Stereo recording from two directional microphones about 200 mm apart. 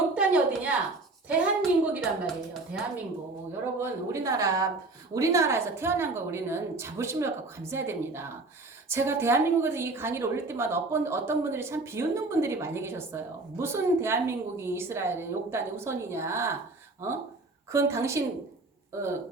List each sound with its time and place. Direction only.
0.1 s a sound: 5° right (ahead or behind)
1.3 s a woman's voice: 5° right (ahead or behind)
3.8 s a woman's voice: 15° right (ahead or behind)
17.7 s a woman's voice: 15° right (ahead or behind)